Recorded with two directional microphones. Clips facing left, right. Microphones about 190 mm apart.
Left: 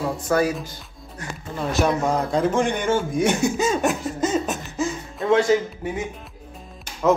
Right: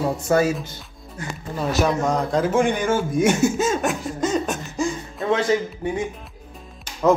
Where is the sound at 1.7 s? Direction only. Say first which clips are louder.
Even; centre (ahead or behind).